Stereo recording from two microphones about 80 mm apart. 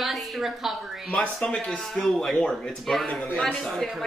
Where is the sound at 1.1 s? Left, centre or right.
Centre.